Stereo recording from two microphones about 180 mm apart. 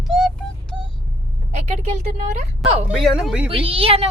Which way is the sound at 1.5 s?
40° right (ahead or behind).